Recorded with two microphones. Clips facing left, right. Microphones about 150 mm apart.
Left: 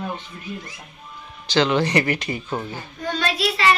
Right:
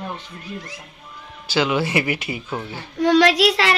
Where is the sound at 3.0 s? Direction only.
90° right.